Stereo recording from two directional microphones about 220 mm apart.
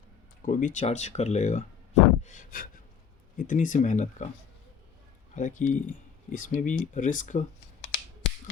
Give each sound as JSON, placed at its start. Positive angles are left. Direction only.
{"t": 0.4, "sound": "speech", "side_deg": 35}
{"t": 2.2, "sound": "gasp", "side_deg": 35}
{"t": 3.3, "sound": "speech", "side_deg": 35}
{"t": 5.3, "sound": "speech", "side_deg": 35}
{"t": 7.8, "sound": "finger snapping", "side_deg": 55}